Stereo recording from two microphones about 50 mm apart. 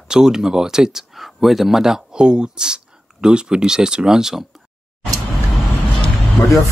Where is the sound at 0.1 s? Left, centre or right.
Centre.